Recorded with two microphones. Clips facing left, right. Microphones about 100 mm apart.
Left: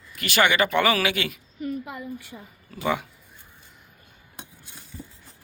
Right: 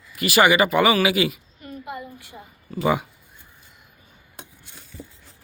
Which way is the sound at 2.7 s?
5° right (ahead or behind).